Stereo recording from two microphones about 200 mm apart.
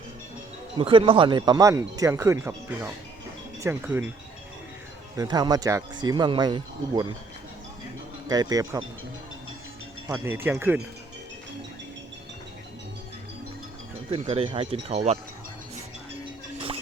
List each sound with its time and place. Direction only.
0.8 s speech: 25° right (ahead or behind)
3.6 s speech: 10° right (ahead or behind)
5.1 s speech: 20° right (ahead or behind)
8.3 s speech: 20° right (ahead or behind)
10.1 s speech: 10° right (ahead or behind)
14.1 s speech: 30° right (ahead or behind)
16.6 s music: 25° right (ahead or behind)